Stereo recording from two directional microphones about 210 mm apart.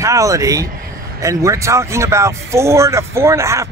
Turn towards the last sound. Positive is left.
turn(degrees=-15)  # may be behind; listen again after turning